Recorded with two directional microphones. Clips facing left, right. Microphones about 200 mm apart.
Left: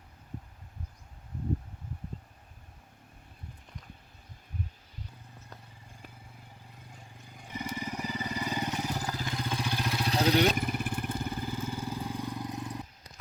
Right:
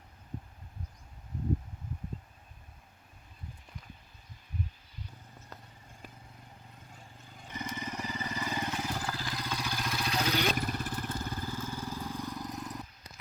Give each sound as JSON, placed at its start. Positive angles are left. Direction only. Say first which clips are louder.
{"t": 6.9, "sound": "vehicle", "louder": "left 2 dB", "side_deg": 10}
{"t": 10.5, "sound": "vehicle", "louder": "left 2 dB", "side_deg": 10}
{"t": 12.3, "sound": "vehicle", "louder": "left 2 dB", "side_deg": 30}